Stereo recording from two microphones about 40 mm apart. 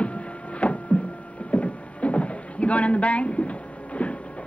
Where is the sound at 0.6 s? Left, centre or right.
Left.